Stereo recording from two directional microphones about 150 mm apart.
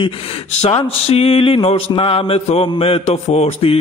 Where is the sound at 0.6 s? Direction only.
40° left (ahead or behind).